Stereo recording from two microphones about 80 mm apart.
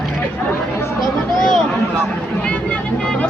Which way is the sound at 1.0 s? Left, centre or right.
Centre.